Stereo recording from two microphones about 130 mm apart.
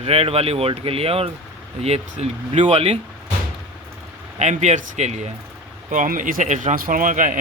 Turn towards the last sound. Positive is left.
turn(degrees=-90)